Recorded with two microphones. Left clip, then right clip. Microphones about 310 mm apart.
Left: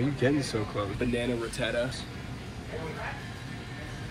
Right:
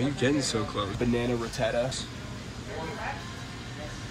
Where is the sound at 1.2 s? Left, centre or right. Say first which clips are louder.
Right 2 dB; right.